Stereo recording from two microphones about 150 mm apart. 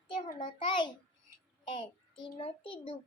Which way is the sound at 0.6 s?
30° left (ahead or behind).